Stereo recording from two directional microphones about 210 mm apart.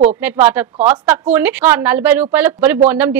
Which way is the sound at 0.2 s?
10° right (ahead or behind).